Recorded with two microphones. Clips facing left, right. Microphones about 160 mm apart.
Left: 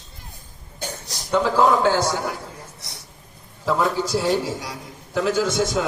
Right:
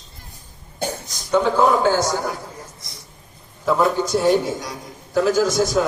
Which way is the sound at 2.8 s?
70° left (ahead or behind).